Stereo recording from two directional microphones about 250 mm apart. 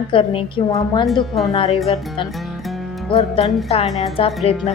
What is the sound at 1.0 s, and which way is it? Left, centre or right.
Speech, centre.